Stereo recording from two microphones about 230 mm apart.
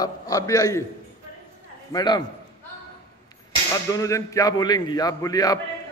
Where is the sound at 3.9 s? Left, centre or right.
Centre.